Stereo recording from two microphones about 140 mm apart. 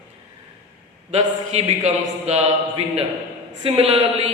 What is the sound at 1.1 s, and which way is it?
A man's voice, 50° right (ahead or behind).